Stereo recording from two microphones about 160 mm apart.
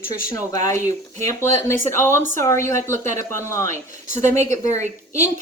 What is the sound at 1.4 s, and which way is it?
Speech, 15° left (ahead or behind).